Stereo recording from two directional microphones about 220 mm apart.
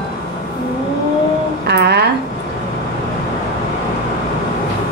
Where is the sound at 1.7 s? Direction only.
50° right (ahead or behind).